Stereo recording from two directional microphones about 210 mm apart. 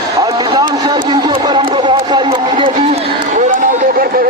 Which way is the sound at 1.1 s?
20° right (ahead or behind).